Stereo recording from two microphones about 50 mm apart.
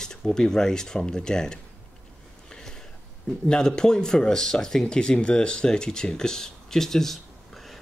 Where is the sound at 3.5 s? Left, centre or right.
Centre.